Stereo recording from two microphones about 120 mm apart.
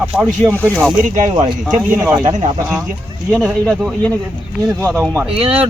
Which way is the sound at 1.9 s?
15° right (ahead or behind).